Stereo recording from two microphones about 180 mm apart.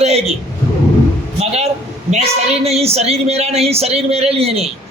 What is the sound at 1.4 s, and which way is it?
A woman's voice, 35° right (ahead or behind).